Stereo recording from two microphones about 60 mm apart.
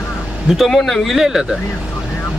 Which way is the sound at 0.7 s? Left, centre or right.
Centre.